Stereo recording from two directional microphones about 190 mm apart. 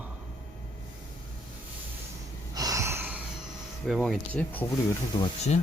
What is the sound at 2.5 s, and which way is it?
Gasp, 20° right (ahead or behind).